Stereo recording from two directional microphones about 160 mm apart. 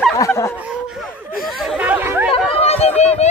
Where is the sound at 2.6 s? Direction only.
40° left (ahead or behind).